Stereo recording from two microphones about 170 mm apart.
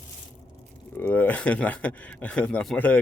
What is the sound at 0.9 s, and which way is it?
Speech, 10° left (ahead or behind).